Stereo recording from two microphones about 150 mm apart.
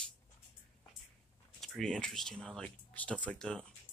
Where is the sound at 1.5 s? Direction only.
5° left (ahead or behind).